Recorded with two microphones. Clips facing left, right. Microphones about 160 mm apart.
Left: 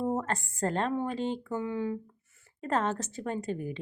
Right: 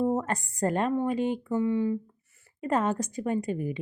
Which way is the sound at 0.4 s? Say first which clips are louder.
Right 3 dB; 15° right (ahead or behind).